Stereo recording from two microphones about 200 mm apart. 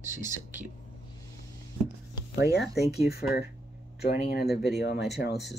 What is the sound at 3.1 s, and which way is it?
Speech, 50° left (ahead or behind).